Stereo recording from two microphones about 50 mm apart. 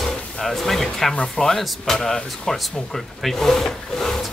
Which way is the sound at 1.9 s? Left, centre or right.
Centre.